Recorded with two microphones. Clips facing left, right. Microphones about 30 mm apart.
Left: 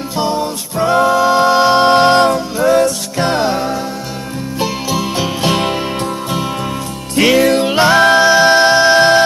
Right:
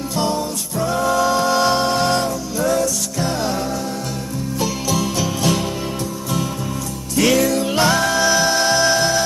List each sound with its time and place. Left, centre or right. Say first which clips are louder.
0.4 s music: left 5 dB; left
1.9 s music: left 9 dB; left
7.4 s music: left 7 dB; left
7.7 s music: left 5 dB; left
8.0 s music: left 8 dB; left